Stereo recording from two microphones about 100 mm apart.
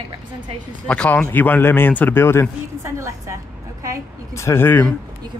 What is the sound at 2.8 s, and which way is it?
Speech, 30° right (ahead or behind).